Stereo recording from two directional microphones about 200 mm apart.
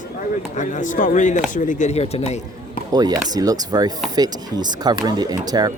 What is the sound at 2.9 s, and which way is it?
Speech, 20° right (ahead or behind).